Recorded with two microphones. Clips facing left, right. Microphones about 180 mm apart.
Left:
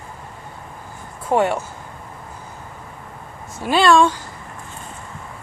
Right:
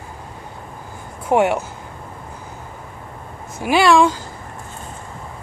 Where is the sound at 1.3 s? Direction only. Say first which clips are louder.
Right 2 dB; 15° right (ahead or behind).